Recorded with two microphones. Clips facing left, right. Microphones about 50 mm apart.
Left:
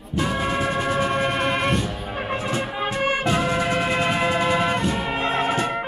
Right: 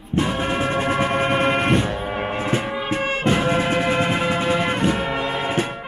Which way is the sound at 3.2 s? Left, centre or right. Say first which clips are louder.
Right 2 dB; right.